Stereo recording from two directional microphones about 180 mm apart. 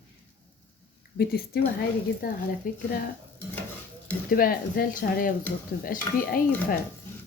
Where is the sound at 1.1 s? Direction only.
60° left (ahead or behind).